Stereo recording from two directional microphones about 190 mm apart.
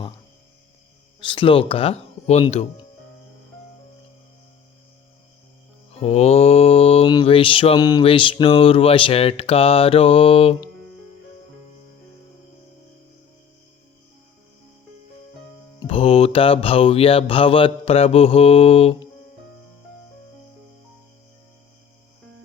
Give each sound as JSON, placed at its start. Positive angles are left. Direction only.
{"t": 1.2, "sound": "mantra", "side_deg": 25}
{"t": 6.0, "sound": "mantra", "side_deg": 35}
{"t": 15.8, "sound": "mantra", "side_deg": 30}